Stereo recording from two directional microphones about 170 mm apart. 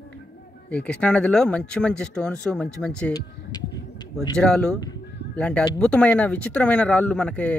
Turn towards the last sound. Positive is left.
turn(degrees=5)  # may be behind; listen again after turning